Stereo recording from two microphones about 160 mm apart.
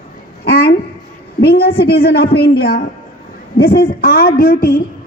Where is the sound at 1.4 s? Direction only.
70° left (ahead or behind).